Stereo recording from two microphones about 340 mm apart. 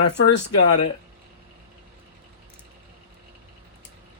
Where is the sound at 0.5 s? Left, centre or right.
Left.